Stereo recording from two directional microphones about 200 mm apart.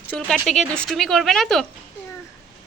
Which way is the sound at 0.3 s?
Centre (ahead or behind).